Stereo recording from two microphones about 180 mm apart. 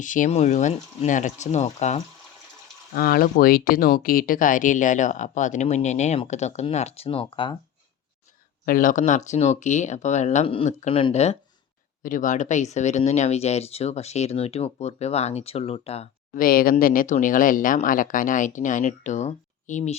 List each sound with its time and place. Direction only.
0.0 s speech: 45° left (ahead or behind)
2.9 s speech: 55° left (ahead or behind); by 7.5 s 30° left (ahead or behind)
8.6 s speech: 50° left (ahead or behind); by 16.0 s 35° left (ahead or behind)
16.3 s speech: 55° left (ahead or behind)